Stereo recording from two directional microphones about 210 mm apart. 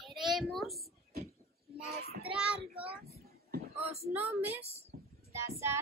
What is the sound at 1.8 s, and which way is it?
Child singing, 30° left (ahead or behind).